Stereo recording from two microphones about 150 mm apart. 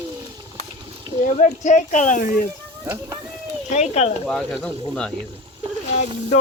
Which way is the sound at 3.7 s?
45° left (ahead or behind).